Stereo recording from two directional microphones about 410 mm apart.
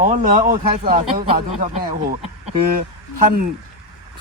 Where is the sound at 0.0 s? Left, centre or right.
Centre.